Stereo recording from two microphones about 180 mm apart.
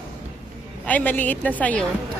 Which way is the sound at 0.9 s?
10° left (ahead or behind).